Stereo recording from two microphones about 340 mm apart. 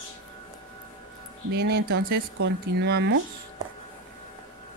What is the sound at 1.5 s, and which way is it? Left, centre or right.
Speech, right.